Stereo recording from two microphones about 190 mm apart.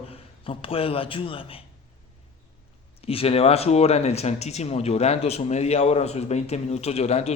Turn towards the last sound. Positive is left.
turn(degrees=35)  # may be behind; listen again after turning